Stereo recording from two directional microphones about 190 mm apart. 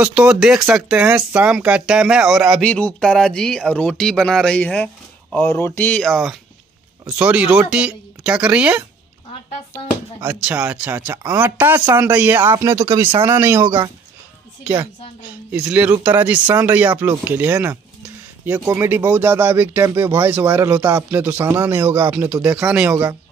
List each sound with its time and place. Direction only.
0.0 s speech: 5° right (ahead or behind)
10.2 s speech: 10° right (ahead or behind)